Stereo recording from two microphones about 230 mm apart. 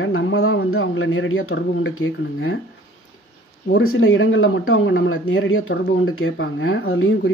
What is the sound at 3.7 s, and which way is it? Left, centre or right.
Speech, left.